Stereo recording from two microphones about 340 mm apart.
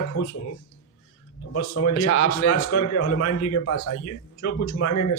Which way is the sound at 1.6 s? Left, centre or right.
Left.